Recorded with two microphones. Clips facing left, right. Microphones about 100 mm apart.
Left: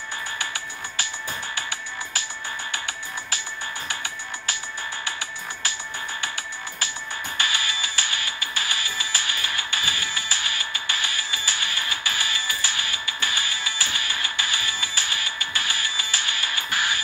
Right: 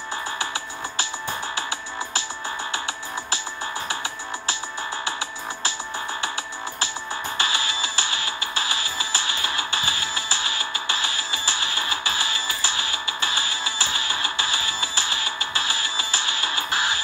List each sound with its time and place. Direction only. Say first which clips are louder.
0.4 s music: right 3 dB; 30° right (ahead or behind)
6.2 s music: right 3 dB; 30° right (ahead or behind)